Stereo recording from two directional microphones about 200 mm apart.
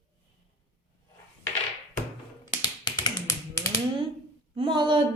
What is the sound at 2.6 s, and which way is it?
Finger snapping, 20° left (ahead or behind).